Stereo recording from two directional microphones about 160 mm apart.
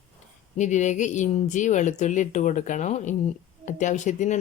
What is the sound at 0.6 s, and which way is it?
Speech, 50° left (ahead or behind).